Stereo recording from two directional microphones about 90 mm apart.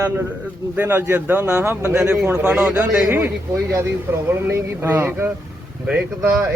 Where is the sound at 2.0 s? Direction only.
15° right (ahead or behind).